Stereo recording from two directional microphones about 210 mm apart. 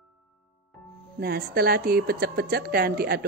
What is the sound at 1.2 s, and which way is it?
A woman's voice, 45° right (ahead or behind).